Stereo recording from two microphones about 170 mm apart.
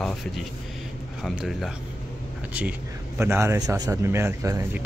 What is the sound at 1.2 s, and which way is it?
Speech, centre (ahead or behind).